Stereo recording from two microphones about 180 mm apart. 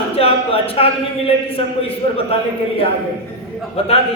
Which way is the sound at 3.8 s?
35° left (ahead or behind).